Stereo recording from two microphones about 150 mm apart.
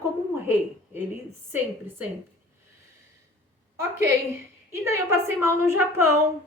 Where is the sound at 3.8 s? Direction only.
20° right (ahead or behind).